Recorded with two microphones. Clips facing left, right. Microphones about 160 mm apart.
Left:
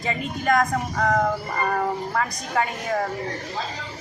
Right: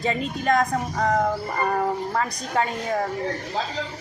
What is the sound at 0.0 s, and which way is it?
Speech, 30° right (ahead or behind).